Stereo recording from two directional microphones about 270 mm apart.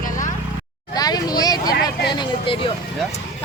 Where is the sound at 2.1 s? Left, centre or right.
Centre.